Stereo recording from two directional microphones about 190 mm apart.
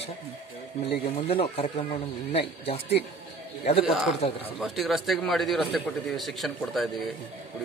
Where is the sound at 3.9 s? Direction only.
Centre (ahead or behind).